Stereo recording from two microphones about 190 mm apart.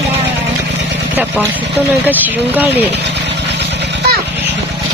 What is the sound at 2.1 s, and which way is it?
Speech, 10° right (ahead or behind).